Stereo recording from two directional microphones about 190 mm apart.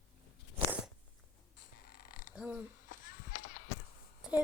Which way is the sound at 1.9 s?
50° left (ahead or behind).